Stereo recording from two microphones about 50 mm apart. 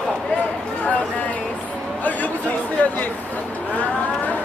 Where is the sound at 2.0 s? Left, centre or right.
Left.